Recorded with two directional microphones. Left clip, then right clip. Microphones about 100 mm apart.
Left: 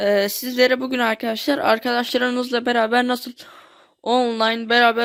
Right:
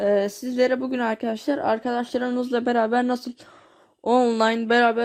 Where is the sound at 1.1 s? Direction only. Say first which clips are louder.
Left 4 dB; 20° left (ahead or behind).